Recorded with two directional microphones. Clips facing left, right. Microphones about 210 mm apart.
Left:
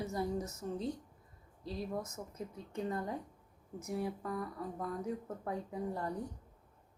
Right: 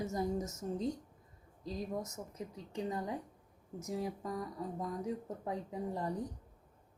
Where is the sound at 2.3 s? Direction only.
15° right (ahead or behind).